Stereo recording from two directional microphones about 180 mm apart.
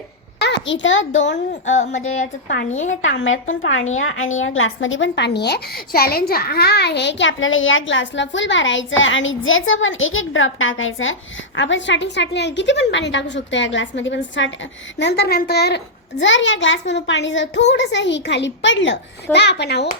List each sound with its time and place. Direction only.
0.4 s a child's voice: 80° left
1.7 s speech: 40° left (ahead or behind)
3.1 s a woman's voice: 90° left
14.9 s a child's voice: 70° left (ahead or behind)
16.2 s a child's voice: 90° left; by 19.9 s 70° left (ahead or behind)